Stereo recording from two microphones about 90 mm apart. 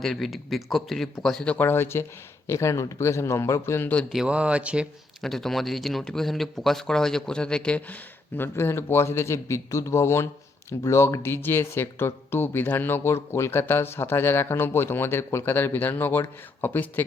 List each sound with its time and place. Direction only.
0.0 s speech: centre (ahead or behind)
1.5 s a man's voice: 25° left (ahead or behind)
4.1 s speech: 10° right (ahead or behind)
5.2 s speech: 5° left (ahead or behind)
8.4 s speech: 25° left (ahead or behind)